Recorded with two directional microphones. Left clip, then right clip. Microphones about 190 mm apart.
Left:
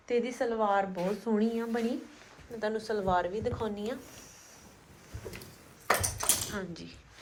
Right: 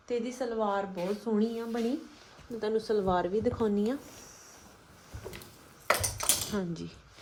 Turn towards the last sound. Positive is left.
turn(degrees=-40)  # may be behind; listen again after turning